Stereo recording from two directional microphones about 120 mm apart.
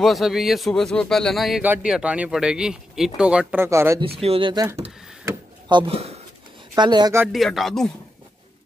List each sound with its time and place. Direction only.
0.0 s a man's voice: centre (ahead or behind)
1.6 s speech: 10° right (ahead or behind)
3.6 s speech: 25° right (ahead or behind)
4.0 s speech: 55° right (ahead or behind)
5.7 s speech: 40° right (ahead or behind)
7.3 s a man's voice: centre (ahead or behind)